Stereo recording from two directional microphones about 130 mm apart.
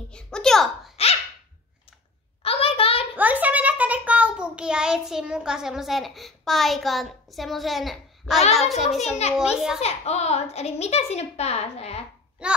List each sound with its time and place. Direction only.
0.1 s a child's voice: 5° left (ahead or behind)
2.4 s a sound: 45° left (ahead or behind)
3.2 s a child's voice: 10° right (ahead or behind)
9.8 s a child's voice: 55° left (ahead or behind)
12.4 s babbling: 10° right (ahead or behind)